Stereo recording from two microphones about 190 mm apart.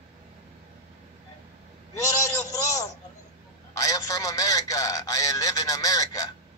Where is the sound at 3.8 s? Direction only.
20° left (ahead or behind).